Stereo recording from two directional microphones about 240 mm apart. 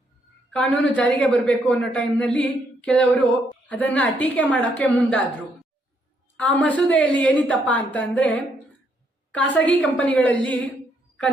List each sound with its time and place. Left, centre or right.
0.5 s a man's voice: centre
6.3 s a man's voice: centre